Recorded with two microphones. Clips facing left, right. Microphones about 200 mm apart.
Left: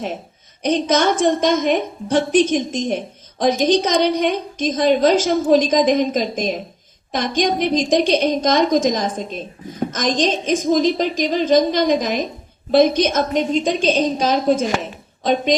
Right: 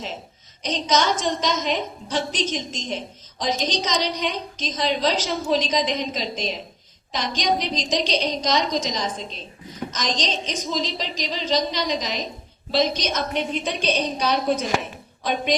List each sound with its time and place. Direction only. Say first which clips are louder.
0.6 s a woman's voice: left 6 dB; 55° left (ahead or behind)